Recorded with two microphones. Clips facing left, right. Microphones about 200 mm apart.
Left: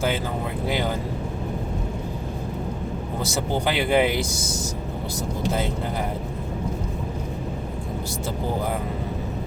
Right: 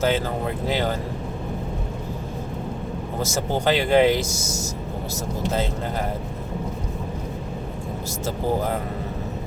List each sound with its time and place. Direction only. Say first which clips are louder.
0.7 s speech: right 1 dB; 15° left (ahead or behind)
3.7 s speech: right 4 dB; 15° left (ahead or behind)
4.4 s speech: even; 35° left (ahead or behind)